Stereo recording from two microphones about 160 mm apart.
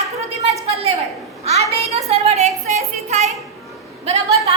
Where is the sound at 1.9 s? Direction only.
40° right (ahead or behind).